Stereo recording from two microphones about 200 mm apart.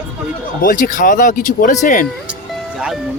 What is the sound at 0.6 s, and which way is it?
Speech, 40° left (ahead or behind).